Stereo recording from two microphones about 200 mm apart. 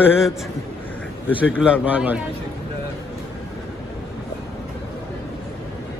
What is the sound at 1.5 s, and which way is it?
Speech, 5° right (ahead or behind).